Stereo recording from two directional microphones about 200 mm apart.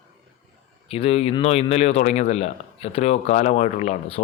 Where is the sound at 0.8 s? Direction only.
30° left (ahead or behind).